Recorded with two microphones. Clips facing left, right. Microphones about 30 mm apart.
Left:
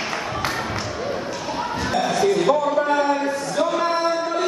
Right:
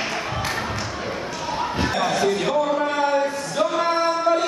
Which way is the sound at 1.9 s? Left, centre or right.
Centre.